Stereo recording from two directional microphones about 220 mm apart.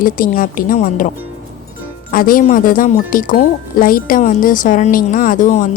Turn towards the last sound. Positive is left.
turn(degrees=35)  # may be behind; listen again after turning